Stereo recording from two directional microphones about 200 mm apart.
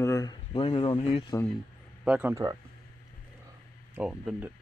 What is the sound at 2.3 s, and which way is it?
Speech, 15° right (ahead or behind).